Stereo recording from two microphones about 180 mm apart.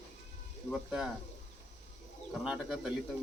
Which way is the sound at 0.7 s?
5° right (ahead or behind).